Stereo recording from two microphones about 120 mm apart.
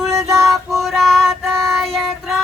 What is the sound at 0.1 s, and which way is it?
Music, 30° right (ahead or behind).